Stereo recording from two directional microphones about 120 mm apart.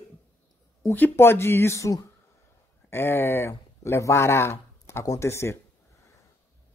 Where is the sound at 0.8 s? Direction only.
20° left (ahead or behind).